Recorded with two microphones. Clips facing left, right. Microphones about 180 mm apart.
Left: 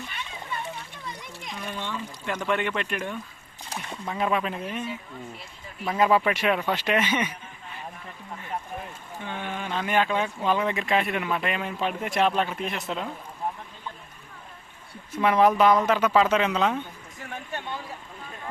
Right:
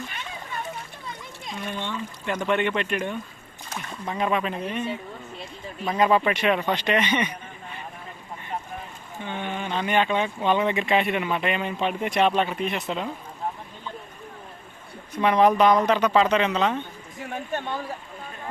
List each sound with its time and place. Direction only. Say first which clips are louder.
1.8 s pour: right 2 dB; 5° left (ahead or behind)
2.3 s speech: right 3 dB; centre (ahead or behind)
3.7 s a sound: even; 20° left (ahead or behind)
4.0 s speech: right 1 dB; centre (ahead or behind)
9.2 s speech: right 3 dB; centre (ahead or behind)
15.1 s speech: right 1 dB; 5° left (ahead or behind)
17.2 s speech: right 6 dB; 45° right (ahead or behind)